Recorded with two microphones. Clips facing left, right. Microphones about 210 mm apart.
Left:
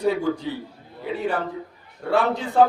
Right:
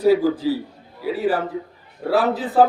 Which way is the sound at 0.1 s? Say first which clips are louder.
Right 8 dB; 35° right (ahead or behind).